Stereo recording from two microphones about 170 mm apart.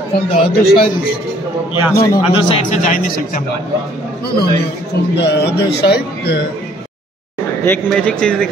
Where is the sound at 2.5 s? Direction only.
45° left (ahead or behind).